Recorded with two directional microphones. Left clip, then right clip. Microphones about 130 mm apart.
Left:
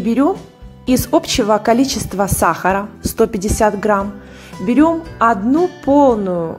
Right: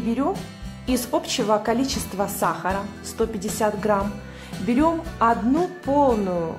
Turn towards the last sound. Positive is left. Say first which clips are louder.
# left 7 dB
turn(degrees=30)  # may be behind; listen again after turning